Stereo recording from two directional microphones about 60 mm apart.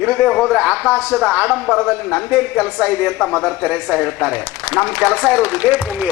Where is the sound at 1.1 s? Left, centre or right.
Centre.